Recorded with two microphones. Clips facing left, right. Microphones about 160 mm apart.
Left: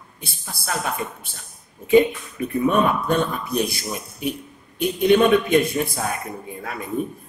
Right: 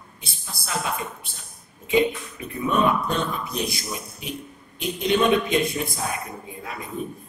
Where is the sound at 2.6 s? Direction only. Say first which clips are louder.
Left 2 dB; 55° left (ahead or behind).